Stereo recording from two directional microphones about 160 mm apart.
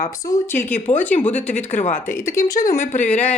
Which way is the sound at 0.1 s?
20° left (ahead or behind).